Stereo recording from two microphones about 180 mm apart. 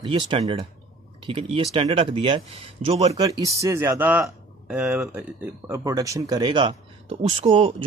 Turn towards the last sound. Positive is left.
turn(degrees=-30)  # may be behind; listen again after turning